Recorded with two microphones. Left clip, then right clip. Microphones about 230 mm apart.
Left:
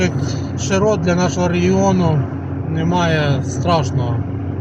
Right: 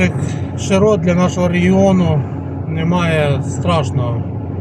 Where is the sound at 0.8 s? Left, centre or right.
Centre.